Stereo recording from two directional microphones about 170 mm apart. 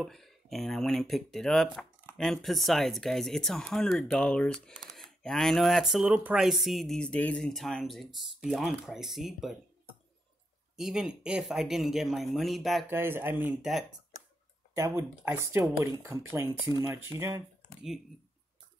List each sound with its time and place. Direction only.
0.0 s speech: centre (ahead or behind)
10.8 s speech: 5° right (ahead or behind)
12.9 s speech: 15° right (ahead or behind)
14.8 s speech: 15° right (ahead or behind)